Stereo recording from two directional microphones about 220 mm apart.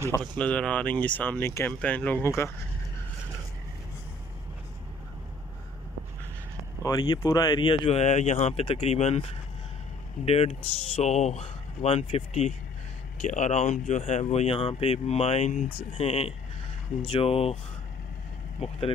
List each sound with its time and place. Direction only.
0.2 s speech: 5° left (ahead or behind)
6.8 s speech: 20° left (ahead or behind)